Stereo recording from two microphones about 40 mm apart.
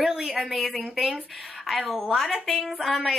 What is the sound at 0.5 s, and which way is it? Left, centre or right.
A woman's voice, centre.